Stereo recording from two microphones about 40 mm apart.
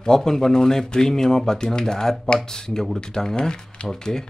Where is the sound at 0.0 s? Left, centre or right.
Centre.